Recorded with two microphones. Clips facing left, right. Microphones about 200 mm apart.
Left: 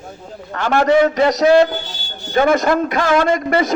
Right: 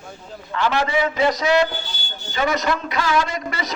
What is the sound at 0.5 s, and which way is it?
A man's voice, 50° left (ahead or behind).